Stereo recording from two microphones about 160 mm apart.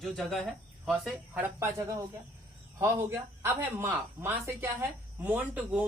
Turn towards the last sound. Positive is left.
turn(degrees=-10)  # may be behind; listen again after turning